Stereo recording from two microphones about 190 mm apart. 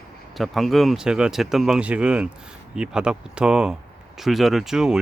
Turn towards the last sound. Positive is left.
turn(degrees=-5)  # may be behind; listen again after turning